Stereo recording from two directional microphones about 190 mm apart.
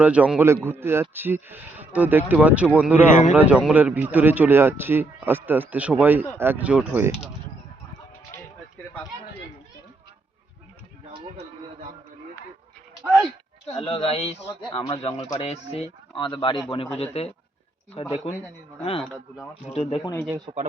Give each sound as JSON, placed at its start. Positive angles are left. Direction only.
{"t": 0.0, "sound": "a man's voice", "side_deg": -5}
{"t": 3.1, "sound": "speech", "side_deg": 40}
{"t": 3.3, "sound": "a man's voice", "side_deg": -5}
{"t": 13.7, "sound": "speech", "side_deg": 30}
{"t": 19.0, "sound": "speech", "side_deg": 0}
{"t": 19.6, "sound": "speech", "side_deg": 30}
{"t": 20.3, "sound": "speech", "side_deg": -25}